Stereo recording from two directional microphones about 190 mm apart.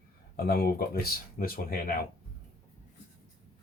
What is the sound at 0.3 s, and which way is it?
Speech, 55° left (ahead or behind).